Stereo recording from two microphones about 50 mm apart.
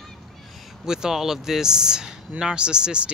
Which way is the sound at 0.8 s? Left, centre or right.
Centre.